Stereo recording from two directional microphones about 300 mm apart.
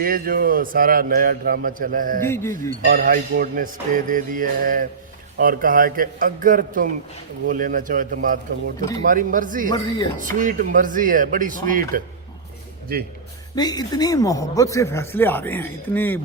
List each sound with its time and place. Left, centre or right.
0.0 s a man's voice: right
2.2 s speech: centre
2.8 s a man's voice: right
13.6 s speech: centre